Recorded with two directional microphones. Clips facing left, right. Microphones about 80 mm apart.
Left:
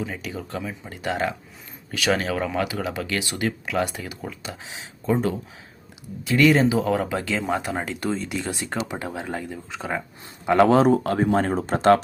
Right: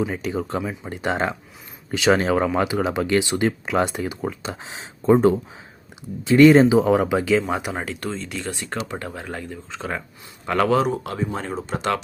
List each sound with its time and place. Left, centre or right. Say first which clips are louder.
0.0 s speech: right 6 dB; right
6.2 s speech: right 6 dB; right; by 7.9 s centre
7.9 s speech: left 2 dB; centre
8.6 s speech: even; centre
10.8 s speech: left 4 dB; left